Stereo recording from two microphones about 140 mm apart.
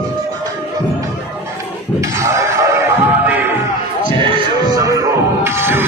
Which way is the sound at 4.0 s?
30° right (ahead or behind).